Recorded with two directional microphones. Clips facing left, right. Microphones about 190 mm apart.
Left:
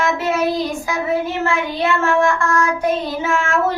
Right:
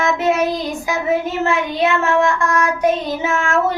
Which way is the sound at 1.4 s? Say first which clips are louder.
Right 2 dB; 20° right (ahead or behind).